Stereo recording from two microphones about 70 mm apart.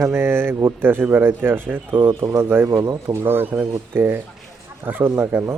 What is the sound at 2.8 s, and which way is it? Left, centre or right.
Speech, right.